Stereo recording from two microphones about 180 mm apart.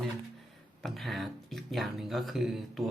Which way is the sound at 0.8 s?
Centre (ahead or behind).